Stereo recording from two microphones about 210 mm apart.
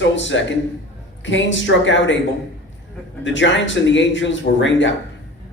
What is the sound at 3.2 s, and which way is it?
A man's voice, 60° left (ahead or behind).